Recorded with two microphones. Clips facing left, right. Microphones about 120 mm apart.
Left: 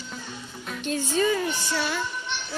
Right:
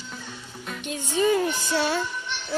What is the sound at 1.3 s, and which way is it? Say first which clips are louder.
Music: right 3 dB; 35° right (ahead or behind).